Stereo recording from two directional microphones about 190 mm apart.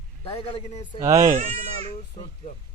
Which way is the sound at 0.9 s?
15° right (ahead or behind).